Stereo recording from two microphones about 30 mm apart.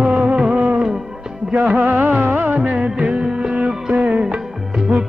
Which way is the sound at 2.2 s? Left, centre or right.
Right.